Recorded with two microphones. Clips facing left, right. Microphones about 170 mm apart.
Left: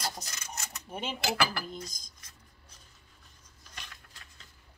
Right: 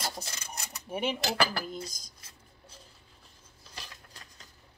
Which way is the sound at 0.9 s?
10° right (ahead or behind).